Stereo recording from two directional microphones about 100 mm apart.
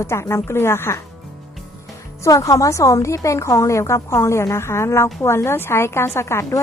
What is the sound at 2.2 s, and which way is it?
A woman's voice, 35° left (ahead or behind).